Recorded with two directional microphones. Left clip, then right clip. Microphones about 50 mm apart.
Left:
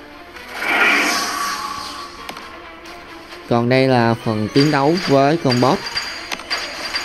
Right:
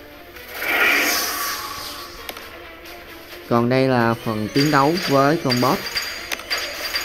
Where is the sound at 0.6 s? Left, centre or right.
Right.